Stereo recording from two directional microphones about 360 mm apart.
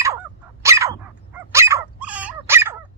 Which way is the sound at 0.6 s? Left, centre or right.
Centre.